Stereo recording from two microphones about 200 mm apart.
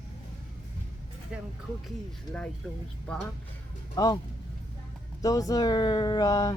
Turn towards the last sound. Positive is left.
turn(degrees=15)  # may be behind; listen again after turning